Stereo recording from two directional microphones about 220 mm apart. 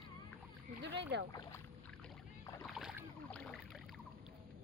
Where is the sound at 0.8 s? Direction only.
50° right (ahead or behind).